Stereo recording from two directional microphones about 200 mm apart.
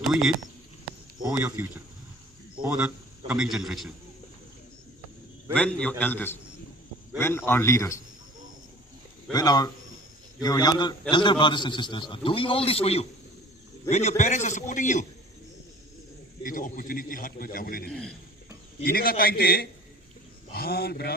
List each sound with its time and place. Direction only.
0.1 s a man's voice: 5° right (ahead or behind)
5.5 s a man's voice: 5° left (ahead or behind)
9.3 s a man's voice: 20° left (ahead or behind); by 15.0 s 40° left (ahead or behind)
16.4 s a man's voice: 45° left (ahead or behind)